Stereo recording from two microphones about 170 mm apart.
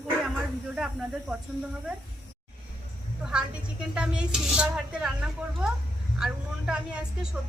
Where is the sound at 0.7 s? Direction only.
5° right (ahead or behind).